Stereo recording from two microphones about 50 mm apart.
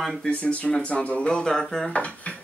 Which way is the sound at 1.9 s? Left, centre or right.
Left.